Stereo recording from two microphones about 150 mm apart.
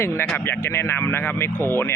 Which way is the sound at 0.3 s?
15° left (ahead or behind).